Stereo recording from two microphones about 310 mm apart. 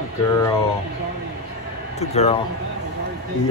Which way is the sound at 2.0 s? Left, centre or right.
Left.